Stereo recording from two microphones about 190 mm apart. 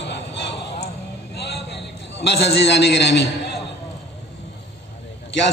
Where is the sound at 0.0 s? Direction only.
65° left (ahead or behind).